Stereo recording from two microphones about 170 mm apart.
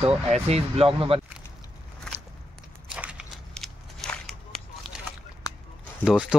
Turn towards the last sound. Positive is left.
turn(degrees=-5)  # may be behind; listen again after turning